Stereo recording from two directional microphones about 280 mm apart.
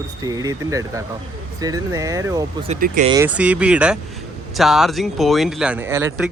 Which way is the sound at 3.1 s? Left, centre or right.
Centre.